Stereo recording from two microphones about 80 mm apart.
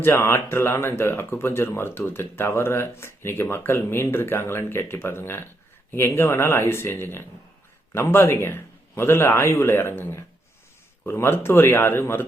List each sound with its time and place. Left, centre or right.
0.0 s speech: left